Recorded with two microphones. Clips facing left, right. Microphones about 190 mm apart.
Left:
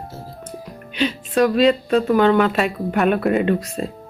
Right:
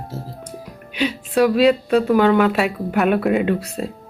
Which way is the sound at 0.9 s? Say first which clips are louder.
Even; 10° right (ahead or behind).